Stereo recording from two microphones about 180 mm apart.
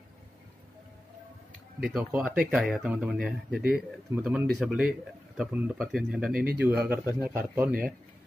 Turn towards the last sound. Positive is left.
turn(degrees=-50)  # may be behind; listen again after turning